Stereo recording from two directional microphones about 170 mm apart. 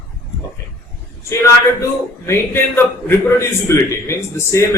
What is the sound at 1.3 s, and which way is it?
A man's voice, 15° left (ahead or behind).